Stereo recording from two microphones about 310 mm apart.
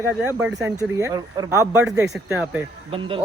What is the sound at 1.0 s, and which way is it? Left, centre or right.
A man's voice, centre.